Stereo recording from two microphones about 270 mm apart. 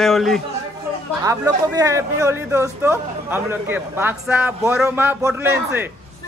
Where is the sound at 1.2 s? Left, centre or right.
Centre.